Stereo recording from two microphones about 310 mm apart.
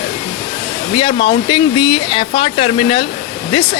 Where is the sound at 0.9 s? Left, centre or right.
Centre.